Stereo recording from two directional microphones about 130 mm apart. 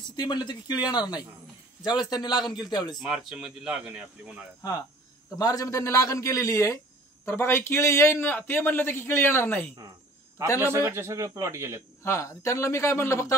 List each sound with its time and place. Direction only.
0.1 s speech: 30° left (ahead or behind)
3.0 s speech: 5° right (ahead or behind)
5.4 s a man's voice: 25° left (ahead or behind)
10.6 s a man's voice: 20° right (ahead or behind)
12.0 s a man's voice: 20° left (ahead or behind)